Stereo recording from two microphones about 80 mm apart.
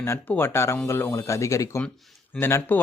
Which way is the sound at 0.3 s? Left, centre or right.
Left.